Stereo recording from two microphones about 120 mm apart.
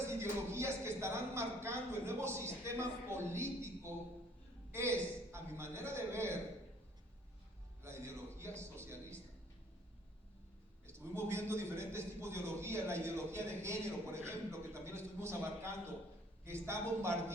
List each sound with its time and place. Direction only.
0.1 s a man's voice: 20° right (ahead or behind)
7.8 s a man's voice: 20° right (ahead or behind)
10.8 s a man's voice: 20° right (ahead or behind)